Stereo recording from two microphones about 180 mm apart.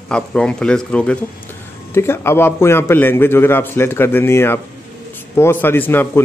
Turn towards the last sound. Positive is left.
turn(degrees=10)  # may be behind; listen again after turning